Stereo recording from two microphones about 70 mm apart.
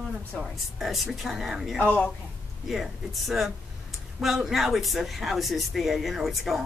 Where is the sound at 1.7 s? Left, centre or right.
Left.